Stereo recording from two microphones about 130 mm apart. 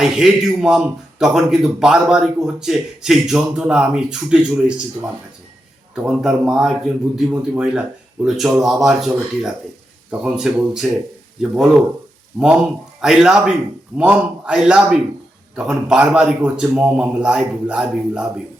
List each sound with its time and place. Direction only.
0.0 s a man's voice: 5° right (ahead or behind)
7.3 s a man's voice: 15° right (ahead or behind)
7.7 s a man's voice: 5° right (ahead or behind)
13.0 s a man's voice: 5° right (ahead or behind)